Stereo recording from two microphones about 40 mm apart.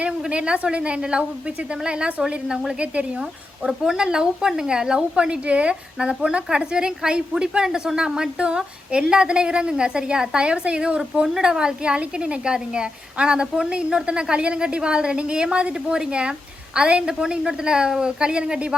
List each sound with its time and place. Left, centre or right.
0.0 s a woman's voice: right
3.7 s a woman's voice: centre